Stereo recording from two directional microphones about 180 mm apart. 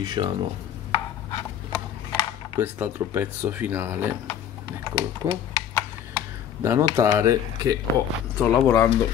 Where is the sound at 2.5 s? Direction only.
10° right (ahead or behind).